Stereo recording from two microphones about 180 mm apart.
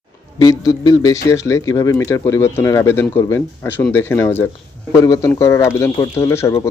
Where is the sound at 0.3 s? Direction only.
20° left (ahead or behind).